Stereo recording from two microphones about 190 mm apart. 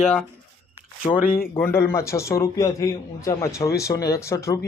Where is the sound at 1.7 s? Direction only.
15° left (ahead or behind).